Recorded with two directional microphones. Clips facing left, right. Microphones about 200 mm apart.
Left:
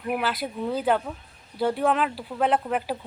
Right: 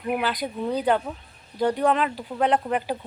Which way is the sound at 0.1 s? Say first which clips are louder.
Right 1 dB; centre (ahead or behind).